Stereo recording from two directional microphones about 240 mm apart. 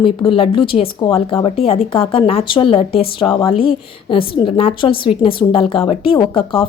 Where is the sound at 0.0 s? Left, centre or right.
Left.